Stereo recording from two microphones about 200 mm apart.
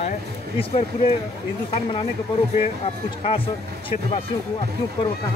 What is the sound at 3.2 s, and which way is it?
Speech, 25° left (ahead or behind).